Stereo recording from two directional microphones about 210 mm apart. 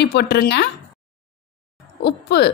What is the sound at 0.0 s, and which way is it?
Speech, 50° left (ahead or behind).